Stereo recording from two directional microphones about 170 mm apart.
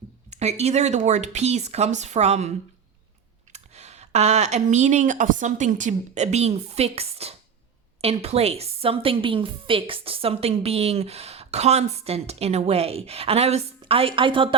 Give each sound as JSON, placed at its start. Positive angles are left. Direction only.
{"t": 0.3, "sound": "a woman's voice", "side_deg": -40}
{"t": 3.5, "sound": "a woman's voice", "side_deg": -40}